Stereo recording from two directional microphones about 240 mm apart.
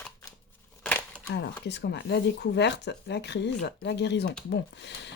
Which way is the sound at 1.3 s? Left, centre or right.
Left.